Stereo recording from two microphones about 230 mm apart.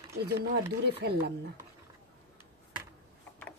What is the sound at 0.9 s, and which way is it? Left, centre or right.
Speech, right.